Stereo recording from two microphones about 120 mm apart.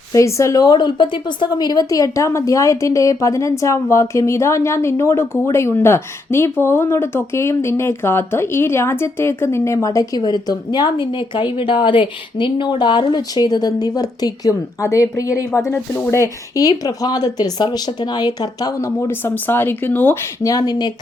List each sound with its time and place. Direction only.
0.1 s a woman's voice: 25° left (ahead or behind)
20.4 s speech: 30° left (ahead or behind)